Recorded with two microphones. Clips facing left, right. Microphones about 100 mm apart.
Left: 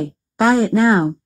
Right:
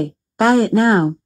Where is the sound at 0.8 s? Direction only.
Centre (ahead or behind).